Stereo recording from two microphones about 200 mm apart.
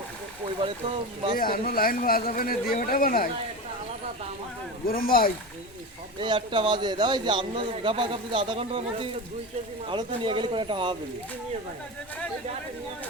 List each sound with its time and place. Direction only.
0.6 s a man's voice: 25° right (ahead or behind)
1.4 s speech: 45° left (ahead or behind)
4.9 s speech: 45° left (ahead or behind)
6.1 s a man's voice: 25° right (ahead or behind)